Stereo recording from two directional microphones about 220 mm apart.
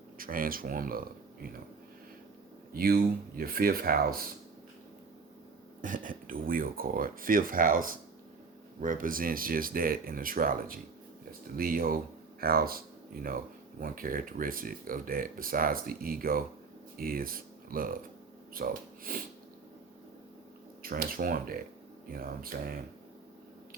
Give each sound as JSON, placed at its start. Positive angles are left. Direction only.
{"t": 0.2, "sound": "speech", "side_deg": -40}
{"t": 2.7, "sound": "speech", "side_deg": -40}
{"t": 5.8, "sound": "speech", "side_deg": -35}
{"t": 20.8, "sound": "speech", "side_deg": -40}